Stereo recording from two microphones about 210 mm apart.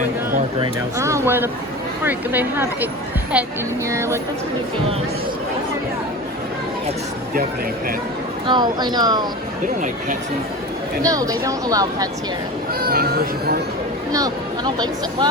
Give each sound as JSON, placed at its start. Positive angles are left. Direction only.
{"t": 0.6, "sound": "speech", "side_deg": -15}
{"t": 8.4, "sound": "speech", "side_deg": -20}
{"t": 11.0, "sound": "speech", "side_deg": -15}
{"t": 12.8, "sound": "a sound", "side_deg": -45}
{"t": 14.1, "sound": "speech", "side_deg": -15}